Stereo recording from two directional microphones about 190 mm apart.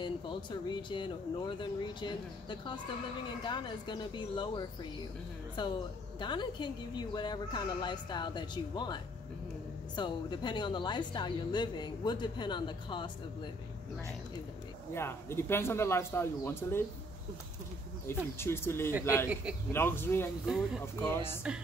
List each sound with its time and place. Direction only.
0.0 s a woman's voice: 25° left (ahead or behind)
15.0 s speech: 15° left (ahead or behind)
18.1 s speech: 15° left (ahead or behind)